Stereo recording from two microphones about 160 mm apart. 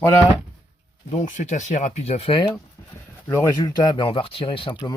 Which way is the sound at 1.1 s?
45° left (ahead or behind).